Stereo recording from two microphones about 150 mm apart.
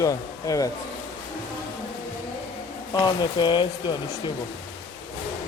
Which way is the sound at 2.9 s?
30° left (ahead or behind).